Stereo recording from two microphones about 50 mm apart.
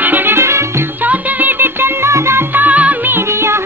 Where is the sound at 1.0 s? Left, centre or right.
Right.